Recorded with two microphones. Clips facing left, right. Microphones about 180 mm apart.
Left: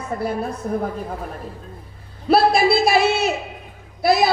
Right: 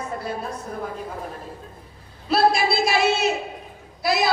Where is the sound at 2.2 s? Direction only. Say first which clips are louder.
Left 4 dB; 55° left (ahead or behind).